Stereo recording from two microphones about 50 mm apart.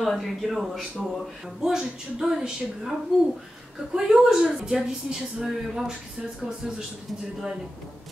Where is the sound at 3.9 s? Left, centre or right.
Centre.